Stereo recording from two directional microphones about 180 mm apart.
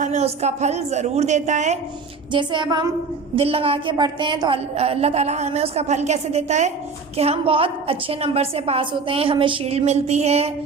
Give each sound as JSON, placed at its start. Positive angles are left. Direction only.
{"t": 0.0, "sound": "a woman's voice", "side_deg": -40}
{"t": 2.3, "sound": "child singing", "side_deg": -25}
{"t": 3.3, "sound": "a woman's voice", "side_deg": -30}